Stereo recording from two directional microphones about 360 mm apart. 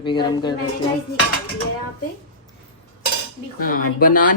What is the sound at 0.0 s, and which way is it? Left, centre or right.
Speech, centre.